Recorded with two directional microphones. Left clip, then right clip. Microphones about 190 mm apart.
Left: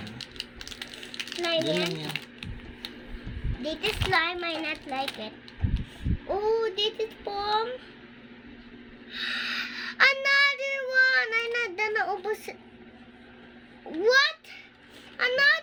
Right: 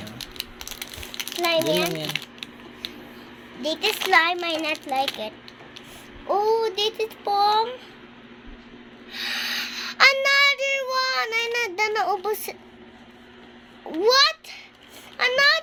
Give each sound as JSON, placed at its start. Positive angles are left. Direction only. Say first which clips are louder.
{"t": 0.2, "sound": "a sound", "louder": "right 5 dB", "side_deg": 15}
{"t": 2.0, "sound": "a sound", "louder": "right 6 dB", "side_deg": -20}
{"t": 3.6, "sound": "a child's voice", "louder": "right 6 dB", "side_deg": 10}
{"t": 6.2, "sound": "a child's voice", "louder": "right 5 dB", "side_deg": 10}
{"t": 9.1, "sound": "child singing", "louder": "right 3 dB", "side_deg": 15}
{"t": 14.0, "sound": "babbling", "louder": "right 4 dB", "side_deg": 10}
{"t": 15.2, "sound": "speech", "louder": "right 4 dB", "side_deg": 15}